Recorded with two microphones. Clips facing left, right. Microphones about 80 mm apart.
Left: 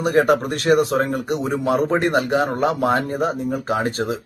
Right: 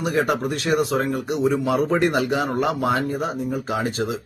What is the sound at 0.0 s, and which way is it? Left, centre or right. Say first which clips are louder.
A man's voice: left 5 dB; left.